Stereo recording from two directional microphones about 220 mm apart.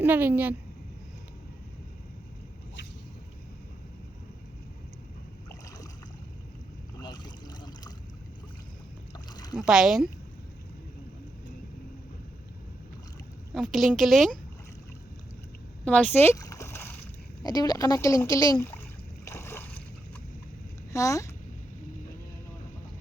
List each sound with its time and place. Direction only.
0.0 s speech: 10° right (ahead or behind)
7.0 s boat: 20° left (ahead or behind)
9.1 s boat: 20° left (ahead or behind)
9.6 s a woman's voice: 5° right (ahead or behind)
13.5 s a woman's voice: centre (ahead or behind)
15.8 s a sound: 5° left (ahead or behind)
17.4 s speech: 20° left (ahead or behind)
19.2 s splash: 10° left (ahead or behind)
20.9 s speech: 15° left (ahead or behind)